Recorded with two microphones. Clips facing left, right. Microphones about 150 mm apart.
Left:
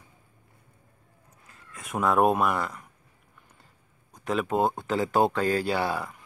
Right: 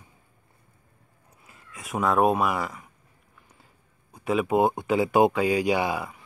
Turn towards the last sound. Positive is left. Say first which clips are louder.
# right 3 dB
turn(degrees=-10)  # may be behind; listen again after turning